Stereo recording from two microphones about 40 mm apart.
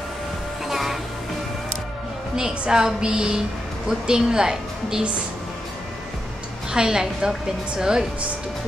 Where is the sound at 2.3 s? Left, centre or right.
Centre.